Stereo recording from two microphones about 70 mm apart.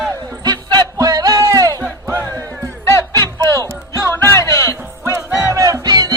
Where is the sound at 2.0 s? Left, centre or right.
Right.